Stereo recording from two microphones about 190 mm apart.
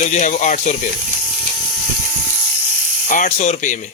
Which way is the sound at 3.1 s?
40° left (ahead or behind).